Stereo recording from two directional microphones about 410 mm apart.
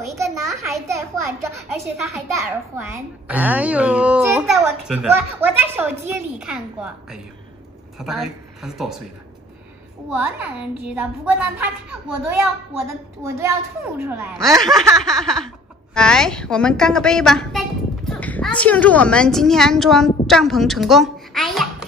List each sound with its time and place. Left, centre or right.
0.1 s a child's voice: centre
10.0 s a child's voice: centre
13.4 s a child's voice: centre